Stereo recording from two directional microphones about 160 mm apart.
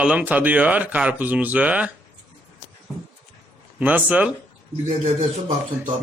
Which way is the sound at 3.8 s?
10° right (ahead or behind).